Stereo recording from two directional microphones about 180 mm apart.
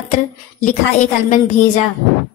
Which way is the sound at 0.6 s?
45° left (ahead or behind).